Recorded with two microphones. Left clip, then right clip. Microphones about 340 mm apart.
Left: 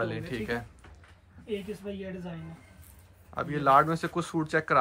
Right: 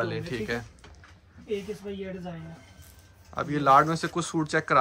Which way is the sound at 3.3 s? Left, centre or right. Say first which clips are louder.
Right 2 dB; centre.